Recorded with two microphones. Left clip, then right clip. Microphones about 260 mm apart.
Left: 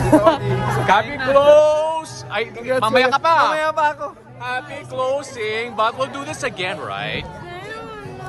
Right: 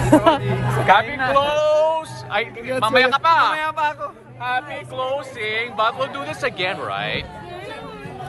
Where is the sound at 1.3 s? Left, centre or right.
Left.